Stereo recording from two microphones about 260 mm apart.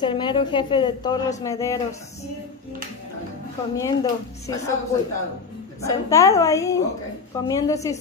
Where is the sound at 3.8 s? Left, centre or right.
Centre.